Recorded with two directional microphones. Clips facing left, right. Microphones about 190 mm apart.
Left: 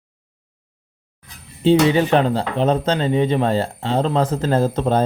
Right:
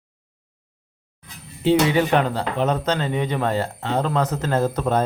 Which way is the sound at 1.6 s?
30° left (ahead or behind).